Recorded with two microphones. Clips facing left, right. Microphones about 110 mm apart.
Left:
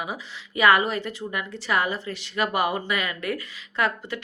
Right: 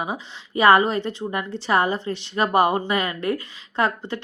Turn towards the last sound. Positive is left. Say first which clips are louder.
# right 3 dB
turn(degrees=-30)  # may be behind; listen again after turning